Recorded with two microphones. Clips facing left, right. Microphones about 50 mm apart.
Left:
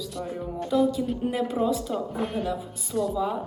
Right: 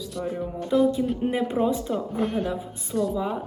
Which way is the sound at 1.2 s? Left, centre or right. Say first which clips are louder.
Right 1 dB; centre.